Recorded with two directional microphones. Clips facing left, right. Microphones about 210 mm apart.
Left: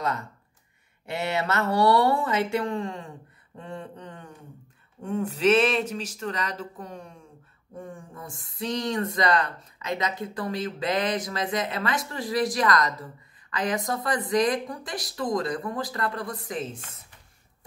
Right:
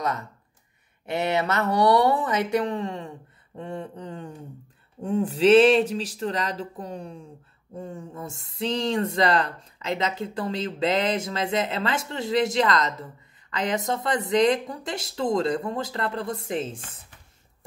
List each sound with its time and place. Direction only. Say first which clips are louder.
1.0 s speech: right 3 dB; 20° right (ahead or behind)